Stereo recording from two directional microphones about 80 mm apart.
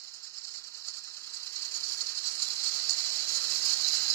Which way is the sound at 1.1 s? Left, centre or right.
Left.